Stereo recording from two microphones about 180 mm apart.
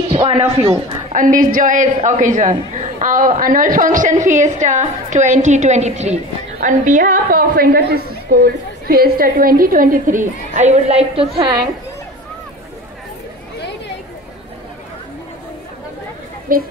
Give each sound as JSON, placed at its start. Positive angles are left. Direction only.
{"t": 0.1, "sound": "a woman's voice", "side_deg": -30}
{"t": 16.5, "sound": "a woman's voice", "side_deg": -50}